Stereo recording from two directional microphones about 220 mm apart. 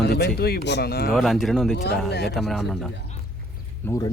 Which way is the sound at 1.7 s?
50° left (ahead or behind).